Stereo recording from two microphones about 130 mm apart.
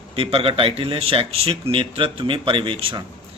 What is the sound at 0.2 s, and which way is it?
A man's voice, 45° right (ahead or behind).